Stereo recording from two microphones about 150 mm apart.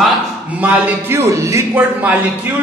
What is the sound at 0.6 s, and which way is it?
A man's voice, 15° right (ahead or behind).